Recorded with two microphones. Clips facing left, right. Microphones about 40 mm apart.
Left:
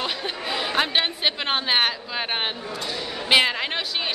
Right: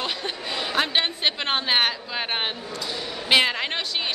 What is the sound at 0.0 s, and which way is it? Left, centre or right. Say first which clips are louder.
Chatter: left 1 dB; centre.